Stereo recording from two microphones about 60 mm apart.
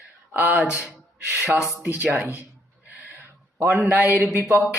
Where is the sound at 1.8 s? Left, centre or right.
Right.